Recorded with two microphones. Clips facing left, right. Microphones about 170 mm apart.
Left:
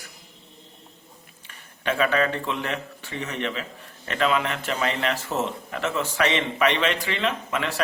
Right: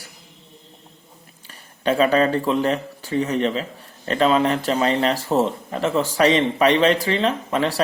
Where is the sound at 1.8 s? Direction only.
35° right (ahead or behind).